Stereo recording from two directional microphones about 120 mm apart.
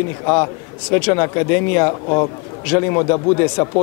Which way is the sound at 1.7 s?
25° left (ahead or behind).